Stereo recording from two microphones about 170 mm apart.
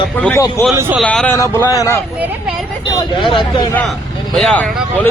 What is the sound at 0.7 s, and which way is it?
Speech, 15° right (ahead or behind).